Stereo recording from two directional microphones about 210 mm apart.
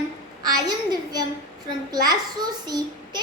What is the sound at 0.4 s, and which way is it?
A child's voice, 20° right (ahead or behind).